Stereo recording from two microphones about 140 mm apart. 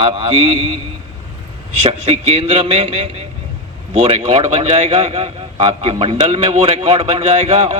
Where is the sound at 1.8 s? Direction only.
45° right (ahead or behind).